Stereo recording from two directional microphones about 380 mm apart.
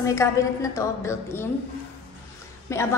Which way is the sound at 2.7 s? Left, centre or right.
Centre.